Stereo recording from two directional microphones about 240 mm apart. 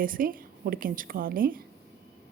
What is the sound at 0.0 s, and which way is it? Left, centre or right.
A woman's voice, right.